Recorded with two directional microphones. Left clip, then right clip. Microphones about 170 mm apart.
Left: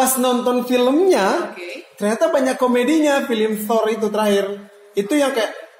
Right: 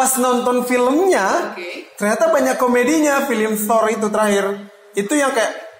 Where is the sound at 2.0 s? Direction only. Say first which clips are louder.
Right 2 dB; 15° left (ahead or behind).